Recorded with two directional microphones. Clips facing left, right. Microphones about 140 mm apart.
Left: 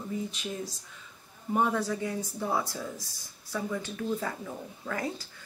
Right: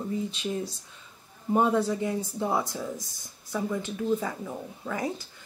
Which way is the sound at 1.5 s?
25° right (ahead or behind).